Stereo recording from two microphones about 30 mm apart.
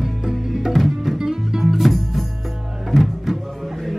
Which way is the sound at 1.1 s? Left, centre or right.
Centre.